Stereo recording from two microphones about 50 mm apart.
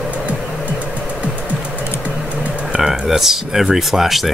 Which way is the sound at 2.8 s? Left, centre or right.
Centre.